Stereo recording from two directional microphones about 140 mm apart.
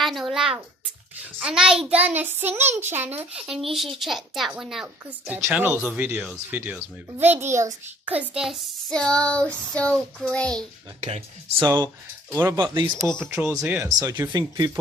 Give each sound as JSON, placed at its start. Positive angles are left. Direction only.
{"t": 0.0, "sound": "a sound", "side_deg": 0}
{"t": 1.4, "sound": "speech", "side_deg": -5}
{"t": 3.4, "sound": "speech", "side_deg": -5}
{"t": 5.2, "sound": "speech", "side_deg": -15}
{"t": 8.2, "sound": "speech", "side_deg": -5}
{"t": 11.0, "sound": "speech", "side_deg": -50}
{"t": 12.3, "sound": "speech", "side_deg": -15}
{"t": 12.5, "sound": "speech", "side_deg": -35}
{"t": 13.0, "sound": "speech", "side_deg": -20}